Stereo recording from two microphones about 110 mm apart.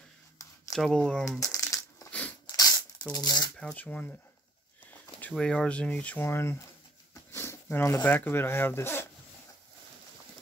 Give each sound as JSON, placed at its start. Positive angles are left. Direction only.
{"t": 0.7, "sound": "speech", "side_deg": 5}
{"t": 1.4, "sound": "a sound", "side_deg": 30}
{"t": 3.1, "sound": "speech", "side_deg": 35}
{"t": 3.5, "sound": "speech", "side_deg": 10}
{"t": 5.3, "sound": "speech", "side_deg": 5}
{"t": 7.3, "sound": "a sound", "side_deg": 25}
{"t": 8.0, "sound": "speech", "side_deg": 15}